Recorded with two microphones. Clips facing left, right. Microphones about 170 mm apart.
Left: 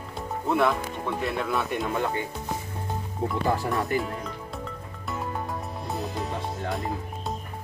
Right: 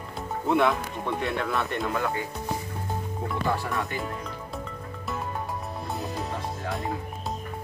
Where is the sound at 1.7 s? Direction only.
20° left (ahead or behind).